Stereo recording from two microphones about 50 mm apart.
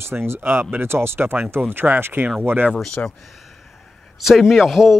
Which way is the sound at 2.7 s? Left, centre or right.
Centre.